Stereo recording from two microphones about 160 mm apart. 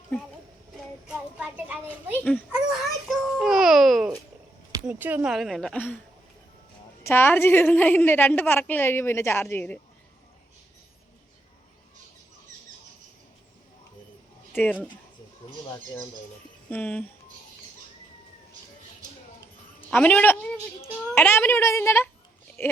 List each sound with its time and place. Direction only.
1.0 s a sound: 5° right (ahead or behind)
2.5 s babbling: 5° right (ahead or behind)
4.9 s a woman's voice: 10° right (ahead or behind); by 6.0 s 10° left (ahead or behind)
7.0 s a woman's voice: 15° left (ahead or behind)
14.5 s a woman's voice: 10° left (ahead or behind)
16.6 s a woman's voice: 10° left (ahead or behind)
19.9 s a woman's voice: 10° left (ahead or behind)
22.6 s a sound: 15° left (ahead or behind)